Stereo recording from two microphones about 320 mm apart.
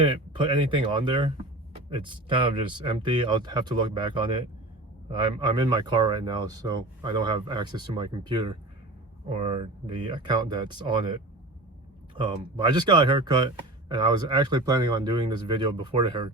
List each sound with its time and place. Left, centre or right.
0.0 s speech: centre